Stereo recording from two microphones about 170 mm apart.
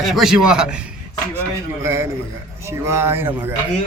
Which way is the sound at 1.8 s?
15° right (ahead or behind).